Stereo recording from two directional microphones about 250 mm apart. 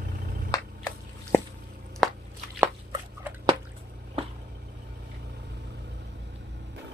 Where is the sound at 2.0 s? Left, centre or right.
Centre.